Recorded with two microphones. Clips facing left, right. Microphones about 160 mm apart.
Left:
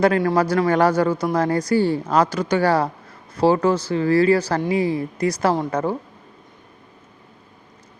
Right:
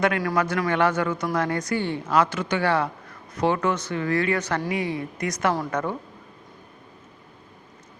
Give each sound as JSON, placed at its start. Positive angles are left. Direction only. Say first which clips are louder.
{"t": 0.0, "sound": "speech", "louder": "left 6 dB", "side_deg": 30}